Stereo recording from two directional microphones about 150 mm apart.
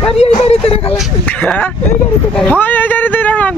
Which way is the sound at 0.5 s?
40° left (ahead or behind).